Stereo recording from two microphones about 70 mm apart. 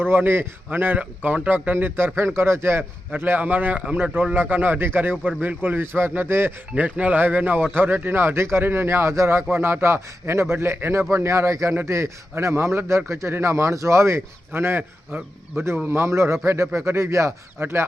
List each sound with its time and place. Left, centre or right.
0.0 s speech: right
3.8 s speech: centre; by 6.5 s right
6.7 s speech: right